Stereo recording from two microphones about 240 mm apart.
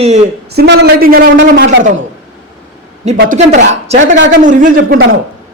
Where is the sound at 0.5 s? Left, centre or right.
Right.